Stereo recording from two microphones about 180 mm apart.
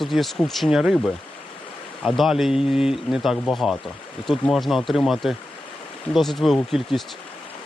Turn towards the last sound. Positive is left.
turn(degrees=0)  # may be behind; listen again after turning